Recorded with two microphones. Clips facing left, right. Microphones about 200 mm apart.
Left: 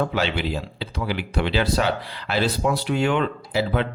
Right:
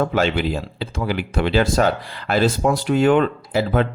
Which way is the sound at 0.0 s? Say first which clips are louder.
Right 4 dB; 50° right (ahead or behind).